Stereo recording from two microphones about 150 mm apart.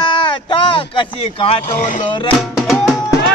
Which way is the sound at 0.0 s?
35° left (ahead or behind).